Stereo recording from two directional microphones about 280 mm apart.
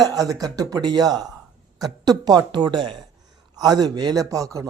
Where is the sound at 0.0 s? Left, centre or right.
Centre.